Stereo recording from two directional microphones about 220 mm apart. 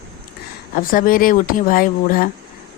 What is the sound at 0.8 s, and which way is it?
A woman's voice, 40° left (ahead or behind).